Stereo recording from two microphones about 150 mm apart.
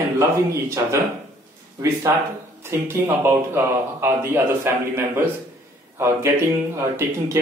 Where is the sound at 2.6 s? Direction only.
15° right (ahead or behind).